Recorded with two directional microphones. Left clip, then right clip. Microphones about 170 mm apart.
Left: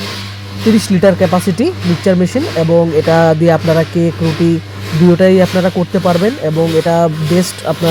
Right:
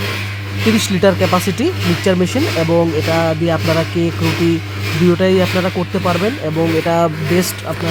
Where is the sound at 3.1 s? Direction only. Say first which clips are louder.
Left 7 dB; 20° left (ahead or behind).